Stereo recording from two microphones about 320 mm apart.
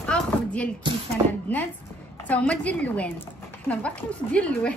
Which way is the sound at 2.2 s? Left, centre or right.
Centre.